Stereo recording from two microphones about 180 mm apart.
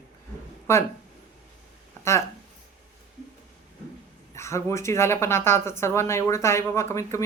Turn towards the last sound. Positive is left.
turn(degrees=15)  # may be behind; listen again after turning